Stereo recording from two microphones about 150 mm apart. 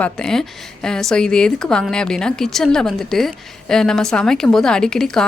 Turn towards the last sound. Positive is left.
turn(degrees=5)  # may be behind; listen again after turning